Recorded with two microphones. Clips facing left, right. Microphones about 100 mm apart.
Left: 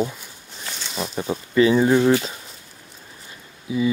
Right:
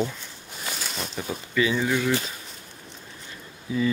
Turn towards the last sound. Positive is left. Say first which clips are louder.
# left 3 dB
turn(degrees=15)  # may be behind; listen again after turning